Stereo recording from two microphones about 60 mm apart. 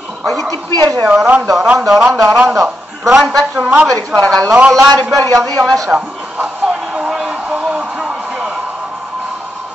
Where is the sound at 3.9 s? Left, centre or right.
Centre.